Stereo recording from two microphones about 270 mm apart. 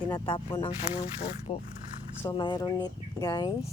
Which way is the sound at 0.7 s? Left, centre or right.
Centre.